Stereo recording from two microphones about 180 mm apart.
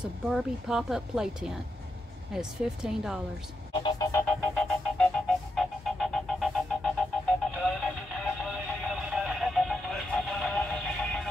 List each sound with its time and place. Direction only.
0.0 s speech: centre (ahead or behind)
3.7 s music: 25° left (ahead or behind)
4.1 s music: 10° left (ahead or behind)